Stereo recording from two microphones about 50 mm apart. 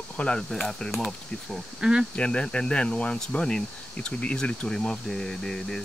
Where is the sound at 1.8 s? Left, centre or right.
Centre.